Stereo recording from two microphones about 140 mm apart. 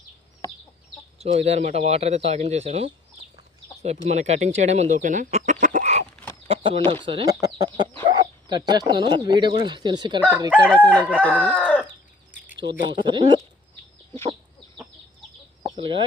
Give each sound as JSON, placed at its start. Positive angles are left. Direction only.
{"t": 1.2, "sound": "a man's voice", "side_deg": -45}
{"t": 6.5, "sound": "a sound", "side_deg": -40}
{"t": 7.0, "sound": "speech", "side_deg": -40}
{"t": 7.4, "sound": "chicken", "side_deg": -30}
{"t": 8.0, "sound": "speech", "side_deg": -30}
{"t": 10.6, "sound": "chicken", "side_deg": 10}
{"t": 12.9, "sound": "speech", "side_deg": -35}
{"t": 15.6, "sound": "chicken", "side_deg": -35}